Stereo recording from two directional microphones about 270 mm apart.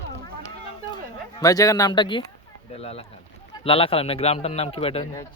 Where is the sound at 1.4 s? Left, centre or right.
Centre.